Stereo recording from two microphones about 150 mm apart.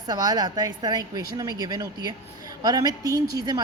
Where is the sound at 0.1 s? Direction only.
25° right (ahead or behind).